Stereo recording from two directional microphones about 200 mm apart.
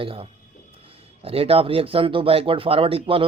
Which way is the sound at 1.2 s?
30° right (ahead or behind).